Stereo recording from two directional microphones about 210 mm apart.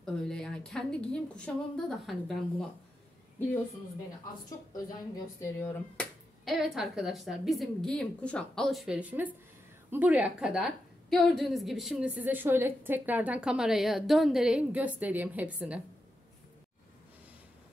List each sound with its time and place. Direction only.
0.0 s a woman's voice: 5° left (ahead or behind)
4.5 s a woman's voice: 15° left (ahead or behind)
5.6 s a woman's voice: 5° left (ahead or behind)